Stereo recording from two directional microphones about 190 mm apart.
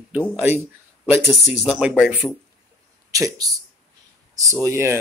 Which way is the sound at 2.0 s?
5° right (ahead or behind).